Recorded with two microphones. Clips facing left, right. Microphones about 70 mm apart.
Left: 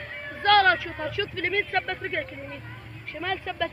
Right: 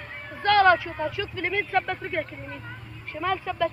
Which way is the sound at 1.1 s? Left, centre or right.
Left.